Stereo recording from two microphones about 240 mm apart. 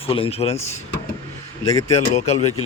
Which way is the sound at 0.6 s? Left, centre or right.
Left.